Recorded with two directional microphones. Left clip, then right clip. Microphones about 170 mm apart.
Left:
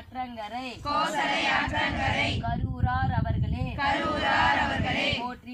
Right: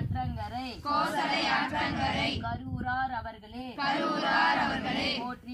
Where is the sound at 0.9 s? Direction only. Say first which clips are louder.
Left 2 dB; 5° right (ahead or behind).